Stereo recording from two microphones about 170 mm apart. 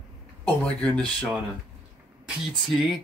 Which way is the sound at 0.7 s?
5° left (ahead or behind).